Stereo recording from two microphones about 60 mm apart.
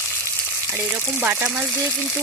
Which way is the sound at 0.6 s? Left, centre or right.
Right.